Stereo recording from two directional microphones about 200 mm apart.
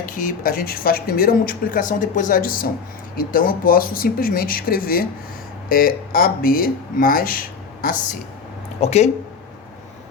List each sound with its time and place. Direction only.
0.0 s speech: 40° left (ahead or behind)
8.8 s speech: 30° left (ahead or behind)